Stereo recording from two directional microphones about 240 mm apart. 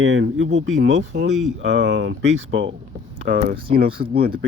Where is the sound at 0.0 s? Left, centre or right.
Right.